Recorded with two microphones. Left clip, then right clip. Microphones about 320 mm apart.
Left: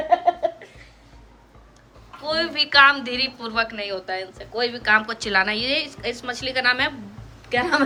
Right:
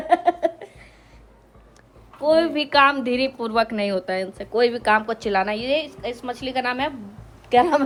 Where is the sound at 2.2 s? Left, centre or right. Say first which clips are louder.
Right 4 dB; centre.